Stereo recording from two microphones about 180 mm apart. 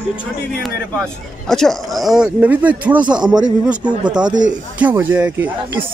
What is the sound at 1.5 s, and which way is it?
Speech, centre (ahead or behind).